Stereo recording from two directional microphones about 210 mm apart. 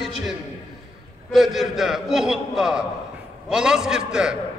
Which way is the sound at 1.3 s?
Centre (ahead or behind).